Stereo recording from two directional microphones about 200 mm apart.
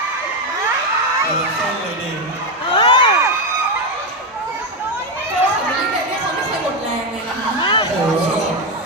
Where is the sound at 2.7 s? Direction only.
25° left (ahead or behind).